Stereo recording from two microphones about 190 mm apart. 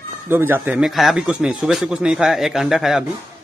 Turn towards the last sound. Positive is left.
turn(degrees=0)  # may be behind; listen again after turning